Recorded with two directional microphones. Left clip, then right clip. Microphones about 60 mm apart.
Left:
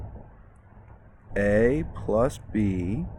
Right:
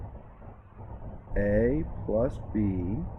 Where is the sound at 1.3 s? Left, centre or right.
Left.